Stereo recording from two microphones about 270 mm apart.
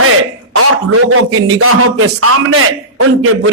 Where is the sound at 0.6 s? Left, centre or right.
Right.